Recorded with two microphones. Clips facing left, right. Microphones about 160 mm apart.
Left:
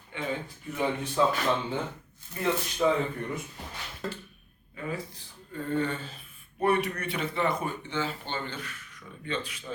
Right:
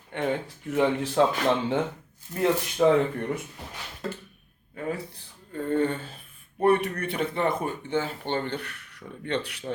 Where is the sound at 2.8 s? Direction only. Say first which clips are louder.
Right 5 dB; 55° right (ahead or behind).